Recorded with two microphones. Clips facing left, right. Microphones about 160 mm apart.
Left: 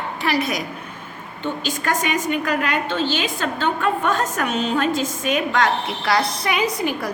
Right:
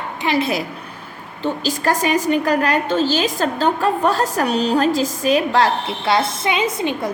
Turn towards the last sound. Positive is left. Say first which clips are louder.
# right 2 dB
turn(degrees=-25)  # may be behind; listen again after turning